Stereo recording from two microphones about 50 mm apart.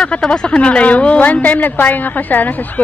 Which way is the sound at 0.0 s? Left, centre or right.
Left.